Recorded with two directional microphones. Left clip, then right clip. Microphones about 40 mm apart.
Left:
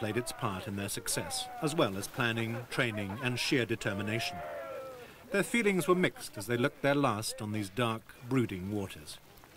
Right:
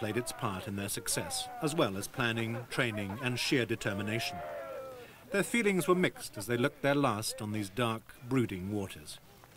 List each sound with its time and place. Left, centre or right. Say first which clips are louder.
0.0 s speech: even; centre
7.4 s speech: left 1 dB; centre